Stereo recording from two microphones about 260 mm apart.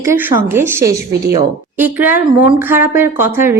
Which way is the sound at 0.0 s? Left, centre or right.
Centre.